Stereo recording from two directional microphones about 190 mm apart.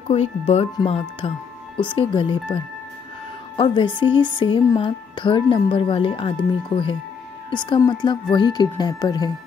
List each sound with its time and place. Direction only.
0.1 s speech: 35° left (ahead or behind)
3.5 s speech: 25° left (ahead or behind)